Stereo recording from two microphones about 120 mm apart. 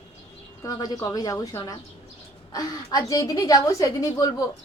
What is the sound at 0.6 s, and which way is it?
A woman's voice, 30° left (ahead or behind).